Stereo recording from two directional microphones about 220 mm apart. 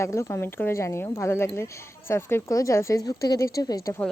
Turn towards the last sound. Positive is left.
turn(degrees=15)  # may be behind; listen again after turning